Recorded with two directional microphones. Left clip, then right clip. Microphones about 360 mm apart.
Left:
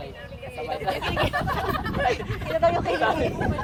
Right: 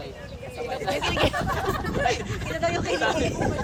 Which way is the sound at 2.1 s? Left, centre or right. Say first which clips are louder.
Left 1 dB; centre.